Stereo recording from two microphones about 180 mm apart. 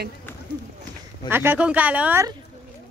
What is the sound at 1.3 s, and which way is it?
Speech, 10° right (ahead or behind).